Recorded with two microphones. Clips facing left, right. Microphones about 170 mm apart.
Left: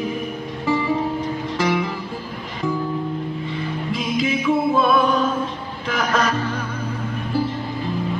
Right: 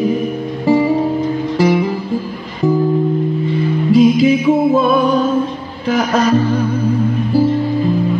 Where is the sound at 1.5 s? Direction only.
35° right (ahead or behind).